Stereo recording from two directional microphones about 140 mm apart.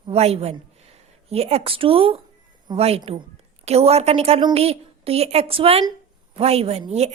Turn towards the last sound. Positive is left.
turn(degrees=-50)  # may be behind; listen again after turning